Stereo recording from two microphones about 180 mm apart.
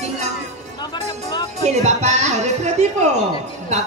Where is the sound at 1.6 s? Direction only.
40° right (ahead or behind).